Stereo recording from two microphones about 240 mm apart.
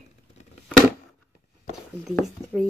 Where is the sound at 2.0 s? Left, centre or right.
Centre.